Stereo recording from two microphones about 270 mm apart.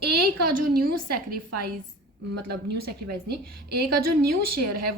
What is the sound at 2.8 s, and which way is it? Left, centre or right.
Speech, right.